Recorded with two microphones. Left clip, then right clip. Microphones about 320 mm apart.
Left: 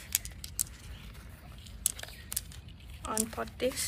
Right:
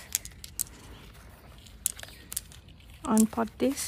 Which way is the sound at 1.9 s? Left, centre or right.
Centre.